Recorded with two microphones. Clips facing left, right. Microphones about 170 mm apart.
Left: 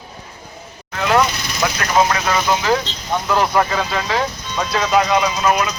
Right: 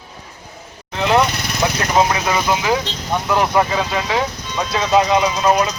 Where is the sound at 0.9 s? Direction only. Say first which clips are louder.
Right 1 dB; 20° right (ahead or behind).